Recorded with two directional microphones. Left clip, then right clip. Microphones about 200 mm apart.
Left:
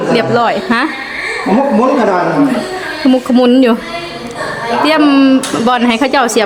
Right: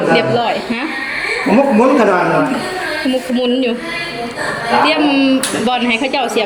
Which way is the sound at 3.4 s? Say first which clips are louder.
Left 8 dB; 40° left (ahead or behind).